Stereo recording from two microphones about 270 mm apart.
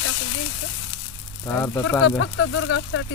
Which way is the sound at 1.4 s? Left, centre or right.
Centre.